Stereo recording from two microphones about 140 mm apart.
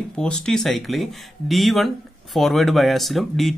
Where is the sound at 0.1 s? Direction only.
5° left (ahead or behind).